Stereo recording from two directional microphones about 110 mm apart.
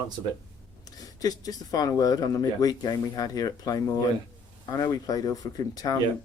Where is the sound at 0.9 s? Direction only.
35° left (ahead or behind).